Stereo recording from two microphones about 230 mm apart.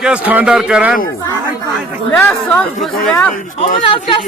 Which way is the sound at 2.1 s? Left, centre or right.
Centre.